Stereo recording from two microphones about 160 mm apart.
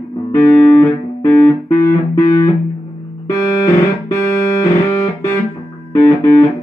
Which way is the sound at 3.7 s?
20° left (ahead or behind).